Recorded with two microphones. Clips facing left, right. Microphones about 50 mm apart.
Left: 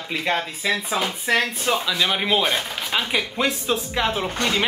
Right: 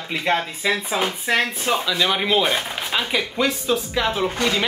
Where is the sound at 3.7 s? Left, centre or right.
Left.